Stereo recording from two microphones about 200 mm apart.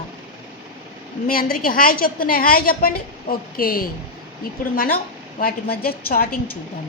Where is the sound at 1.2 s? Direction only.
45° left (ahead or behind).